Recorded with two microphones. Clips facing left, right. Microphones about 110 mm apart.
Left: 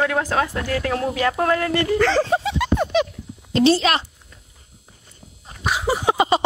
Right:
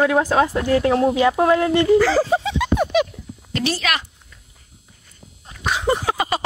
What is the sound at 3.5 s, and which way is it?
Speech, 30° left (ahead or behind).